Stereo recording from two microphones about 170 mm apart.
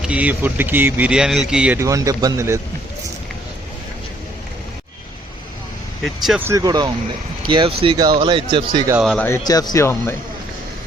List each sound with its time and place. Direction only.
0.0 s speech: 5° right (ahead or behind)
1.8 s speech: 20° right (ahead or behind)
6.4 s speech: 20° right (ahead or behind)
9.0 s speech: centre (ahead or behind)
9.2 s speech: 20° left (ahead or behind)